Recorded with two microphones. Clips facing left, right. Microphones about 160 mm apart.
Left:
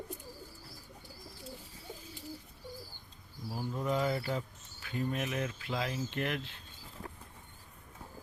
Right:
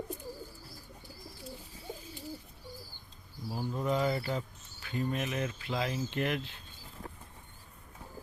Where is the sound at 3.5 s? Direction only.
10° right (ahead or behind).